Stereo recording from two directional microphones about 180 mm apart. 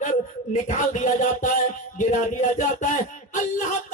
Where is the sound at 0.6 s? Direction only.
45° left (ahead or behind).